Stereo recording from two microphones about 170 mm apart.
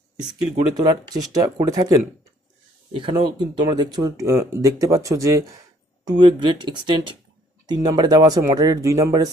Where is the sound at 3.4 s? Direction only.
25° right (ahead or behind).